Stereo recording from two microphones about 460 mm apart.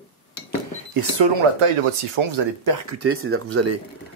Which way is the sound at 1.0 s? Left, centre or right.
Right.